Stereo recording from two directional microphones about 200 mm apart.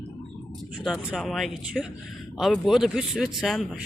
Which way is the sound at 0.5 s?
Centre (ahead or behind).